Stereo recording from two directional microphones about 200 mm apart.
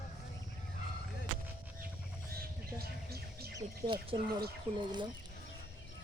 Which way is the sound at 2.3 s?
50° right (ahead or behind).